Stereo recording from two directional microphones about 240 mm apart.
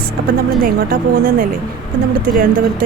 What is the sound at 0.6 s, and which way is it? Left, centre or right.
Speech, right.